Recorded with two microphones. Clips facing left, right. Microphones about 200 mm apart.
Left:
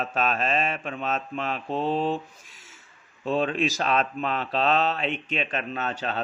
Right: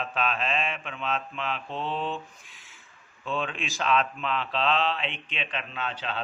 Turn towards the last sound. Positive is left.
turn(degrees=45)  # may be behind; listen again after turning